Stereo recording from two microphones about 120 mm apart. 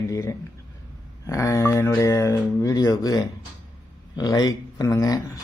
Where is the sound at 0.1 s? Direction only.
25° left (ahead or behind).